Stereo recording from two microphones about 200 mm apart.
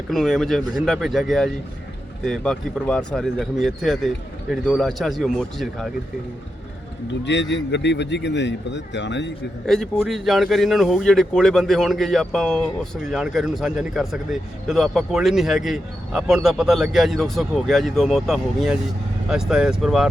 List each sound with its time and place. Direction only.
0.1 s speech: centre (ahead or behind)
7.3 s speech: 60° left (ahead or behind)
9.6 s speech: centre (ahead or behind)